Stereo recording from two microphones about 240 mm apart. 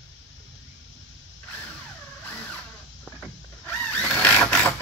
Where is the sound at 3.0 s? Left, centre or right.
Centre.